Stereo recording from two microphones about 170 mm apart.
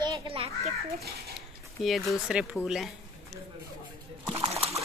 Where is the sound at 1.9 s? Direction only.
Centre (ahead or behind).